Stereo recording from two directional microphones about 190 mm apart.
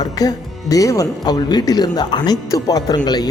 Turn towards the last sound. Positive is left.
turn(degrees=20)  # may be behind; listen again after turning